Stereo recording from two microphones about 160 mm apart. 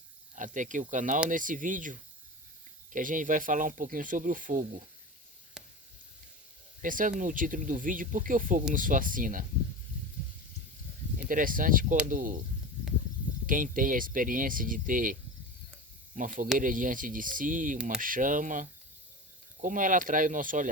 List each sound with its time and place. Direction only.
0.3 s speech: 50° right (ahead or behind)
5.6 s a sound: 5° right (ahead or behind)
6.8 s speech: 55° right (ahead or behind)
11.3 s speech: 60° right (ahead or behind)
13.5 s speech: 55° right (ahead or behind)